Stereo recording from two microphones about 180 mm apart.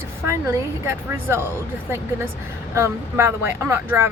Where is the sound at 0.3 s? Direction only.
15° right (ahead or behind).